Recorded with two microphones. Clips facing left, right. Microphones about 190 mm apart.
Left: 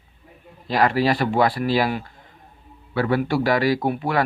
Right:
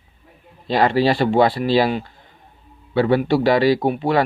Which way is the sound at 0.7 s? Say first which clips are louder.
Right 3 dB; 25° right (ahead or behind).